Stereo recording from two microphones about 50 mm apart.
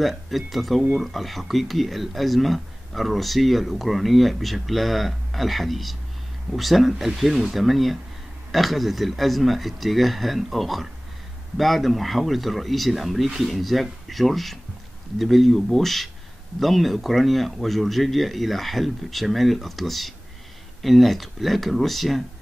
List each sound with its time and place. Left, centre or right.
0.3 s speech: centre